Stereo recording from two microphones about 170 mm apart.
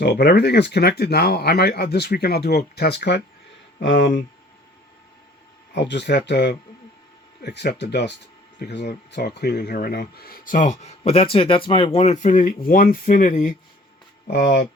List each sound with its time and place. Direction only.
0.0 s speech: 70° left (ahead or behind)
3.8 s speech: 90° left
5.7 s speech: 90° left
8.5 s speech: 75° left (ahead or behind); by 13.5 s 50° left (ahead or behind)
14.3 s speech: 80° left